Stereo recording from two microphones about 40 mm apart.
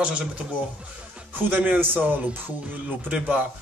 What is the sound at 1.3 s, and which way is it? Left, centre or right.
Speech, right.